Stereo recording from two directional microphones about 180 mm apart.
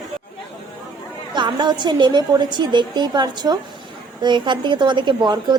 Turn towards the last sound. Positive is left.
turn(degrees=-25)  # may be behind; listen again after turning